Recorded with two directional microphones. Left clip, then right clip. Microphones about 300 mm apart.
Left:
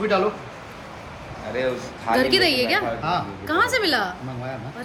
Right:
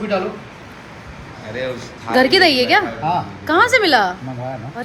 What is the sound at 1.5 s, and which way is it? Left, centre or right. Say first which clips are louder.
Speech: even; left.